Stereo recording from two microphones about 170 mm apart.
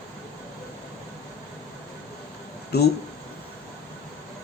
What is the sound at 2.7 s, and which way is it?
Speech, 70° left (ahead or behind).